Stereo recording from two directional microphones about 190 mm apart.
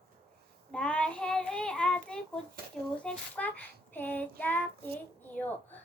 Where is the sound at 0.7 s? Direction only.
5° left (ahead or behind).